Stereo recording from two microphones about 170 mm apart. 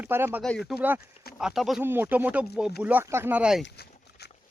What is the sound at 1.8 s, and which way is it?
Speech, 15° right (ahead or behind).